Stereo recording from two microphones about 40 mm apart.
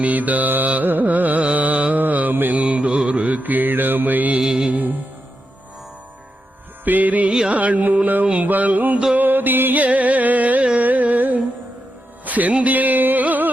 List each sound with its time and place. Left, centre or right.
0.0 s music: right
2.6 s mantra: right
4.4 s music: centre
4.7 s music: right
6.8 s music: right
7.3 s music: right
7.5 s carnatic music: right
8.0 s a sound: right
9.1 s music: right
9.8 s carnatic music: right
12.2 s music: right